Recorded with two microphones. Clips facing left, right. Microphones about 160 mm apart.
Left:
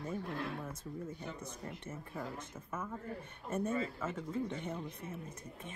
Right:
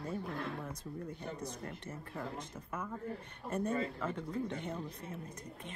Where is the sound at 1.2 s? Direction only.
35° right (ahead or behind).